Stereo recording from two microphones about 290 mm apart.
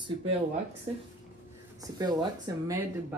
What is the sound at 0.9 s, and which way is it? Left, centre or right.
Speech, centre.